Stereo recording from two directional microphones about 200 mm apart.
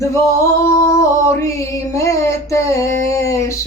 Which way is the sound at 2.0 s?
15° left (ahead or behind).